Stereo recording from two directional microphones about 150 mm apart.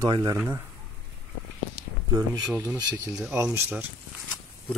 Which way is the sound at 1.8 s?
90° right.